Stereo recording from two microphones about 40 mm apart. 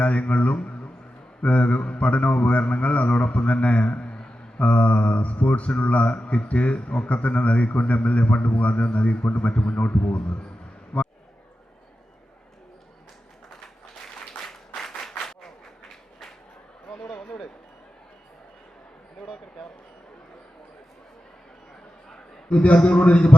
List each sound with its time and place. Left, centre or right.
0.0 s speech: left
10.9 s basketball bounce: left
14.8 s applause: centre
22.4 s a man's voice: left